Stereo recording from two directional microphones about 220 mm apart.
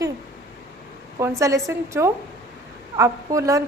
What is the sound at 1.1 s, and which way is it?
A woman's voice, 15° right (ahead or behind).